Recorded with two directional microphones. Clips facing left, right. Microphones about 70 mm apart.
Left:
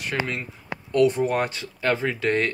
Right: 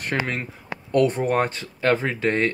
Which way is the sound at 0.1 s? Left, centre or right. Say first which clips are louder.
Right 1 dB; right.